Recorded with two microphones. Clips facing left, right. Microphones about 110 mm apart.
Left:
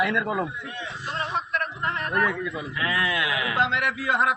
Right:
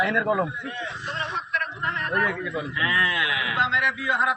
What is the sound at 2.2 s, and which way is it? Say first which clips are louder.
Speech: even; centre (ahead or behind).